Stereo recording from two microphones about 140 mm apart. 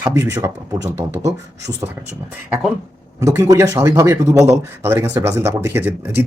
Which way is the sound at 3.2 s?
20° right (ahead or behind).